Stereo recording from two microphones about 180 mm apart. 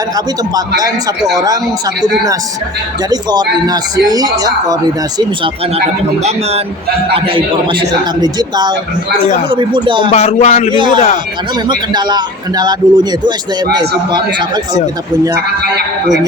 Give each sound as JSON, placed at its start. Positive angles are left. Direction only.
{"t": 0.8, "sound": "speech", "side_deg": -20}
{"t": 3.1, "sound": "speech", "side_deg": -20}
{"t": 7.1, "sound": "speech", "side_deg": -30}
{"t": 10.1, "sound": "speech", "side_deg": 35}
{"t": 10.7, "sound": "speech", "side_deg": -25}